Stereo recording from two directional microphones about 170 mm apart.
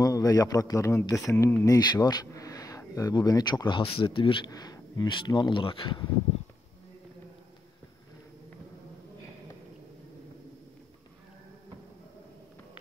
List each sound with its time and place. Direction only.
0.0 s speech: 20° left (ahead or behind)